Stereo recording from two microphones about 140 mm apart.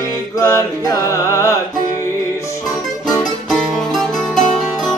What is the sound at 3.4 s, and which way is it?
Music, centre (ahead or behind).